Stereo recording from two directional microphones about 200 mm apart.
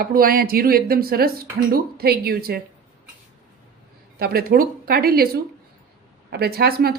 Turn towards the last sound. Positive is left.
turn(degrees=-50)  # may be behind; listen again after turning